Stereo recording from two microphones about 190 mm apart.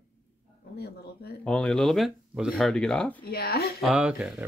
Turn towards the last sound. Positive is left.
turn(degrees=-5)  # may be behind; listen again after turning